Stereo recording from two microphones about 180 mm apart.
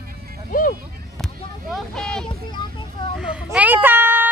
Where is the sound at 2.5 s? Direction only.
25° left (ahead or behind).